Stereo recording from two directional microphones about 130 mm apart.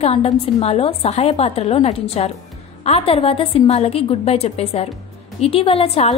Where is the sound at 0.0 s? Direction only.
50° left (ahead or behind).